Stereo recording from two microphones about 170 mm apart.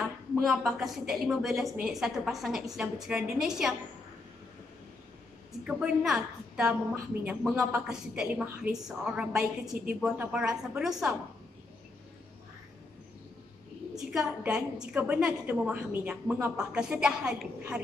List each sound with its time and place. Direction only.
0.4 s a woman's voice: centre (ahead or behind)
5.7 s a woman's voice: 5° right (ahead or behind)
13.9 s a woman's voice: 5° right (ahead or behind)